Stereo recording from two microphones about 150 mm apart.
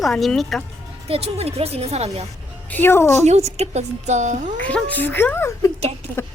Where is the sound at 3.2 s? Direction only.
45° right (ahead or behind).